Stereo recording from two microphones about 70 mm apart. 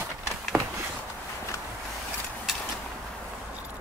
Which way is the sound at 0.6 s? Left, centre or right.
Right.